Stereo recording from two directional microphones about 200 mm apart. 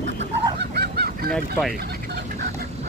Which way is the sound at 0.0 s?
60° right (ahead or behind).